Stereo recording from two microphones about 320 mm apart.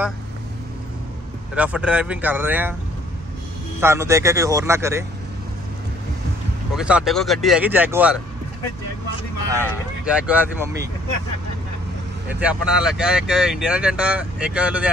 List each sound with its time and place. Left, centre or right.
1.5 s speech: centre
3.8 s speech: centre
6.7 s speech: centre
9.7 s speech: centre
12.3 s speech: centre